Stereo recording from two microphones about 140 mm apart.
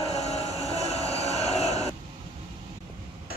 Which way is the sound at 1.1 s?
50° left (ahead or behind).